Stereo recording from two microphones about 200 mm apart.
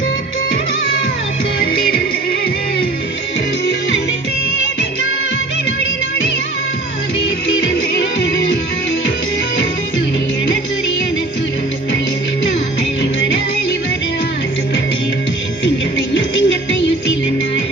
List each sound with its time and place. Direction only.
16.1 s music: 65° left (ahead or behind)